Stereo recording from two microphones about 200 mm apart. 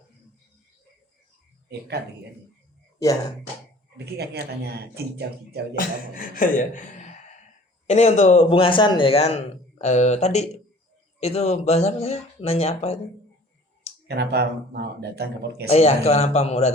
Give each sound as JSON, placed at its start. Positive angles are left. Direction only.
{"t": 3.0, "sound": "speech", "side_deg": 15}
{"t": 3.9, "sound": "speech", "side_deg": -55}
{"t": 5.7, "sound": "a man's voice", "side_deg": 45}
{"t": 14.1, "sound": "speech", "side_deg": -55}
{"t": 15.7, "sound": "a man's voice", "side_deg": 30}